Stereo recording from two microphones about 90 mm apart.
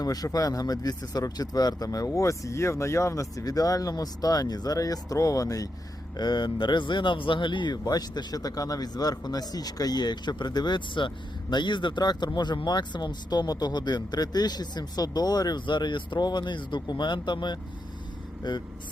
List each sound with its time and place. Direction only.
0.0 s speech: 45° left (ahead or behind)
6.1 s speech: 55° left (ahead or behind)